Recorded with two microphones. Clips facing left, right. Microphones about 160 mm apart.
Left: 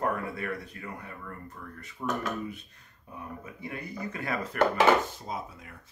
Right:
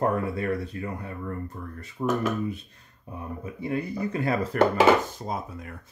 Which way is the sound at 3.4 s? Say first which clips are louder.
Right 10 dB; 30° right (ahead or behind).